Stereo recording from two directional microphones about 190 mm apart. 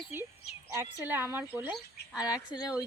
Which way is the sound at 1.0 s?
10° right (ahead or behind).